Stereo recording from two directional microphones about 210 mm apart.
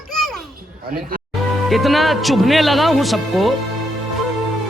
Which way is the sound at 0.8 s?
45° right (ahead or behind).